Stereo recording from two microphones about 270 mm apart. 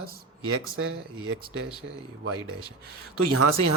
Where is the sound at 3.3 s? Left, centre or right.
Right.